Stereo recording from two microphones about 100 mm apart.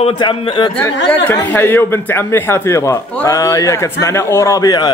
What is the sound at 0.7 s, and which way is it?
A man's voice, 20° left (ahead or behind).